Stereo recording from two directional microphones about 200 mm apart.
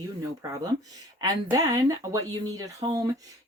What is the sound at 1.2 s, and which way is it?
Speech, 15° right (ahead or behind).